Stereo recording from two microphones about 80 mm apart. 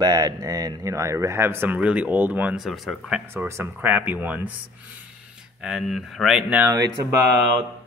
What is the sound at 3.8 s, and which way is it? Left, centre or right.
Speech, right.